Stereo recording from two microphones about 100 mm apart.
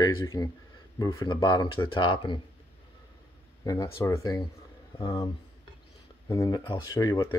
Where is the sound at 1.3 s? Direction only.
45° left (ahead or behind).